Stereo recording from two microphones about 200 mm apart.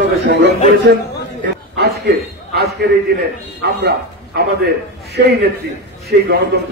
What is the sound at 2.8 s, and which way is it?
Speech, 55° right (ahead or behind).